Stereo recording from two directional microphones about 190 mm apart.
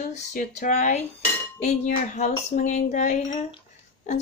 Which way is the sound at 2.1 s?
40° left (ahead or behind).